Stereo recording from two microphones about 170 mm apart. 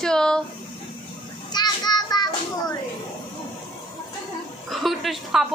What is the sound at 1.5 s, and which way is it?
Child singing, 25° left (ahead or behind).